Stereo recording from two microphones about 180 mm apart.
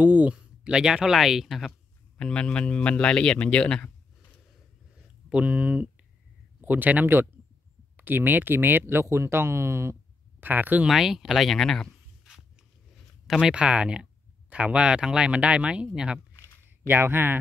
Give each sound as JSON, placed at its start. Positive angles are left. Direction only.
{"t": 0.0, "sound": "speech", "side_deg": -10}
{"t": 4.9, "sound": "a sound", "side_deg": -5}
{"t": 6.6, "sound": "speech", "side_deg": -10}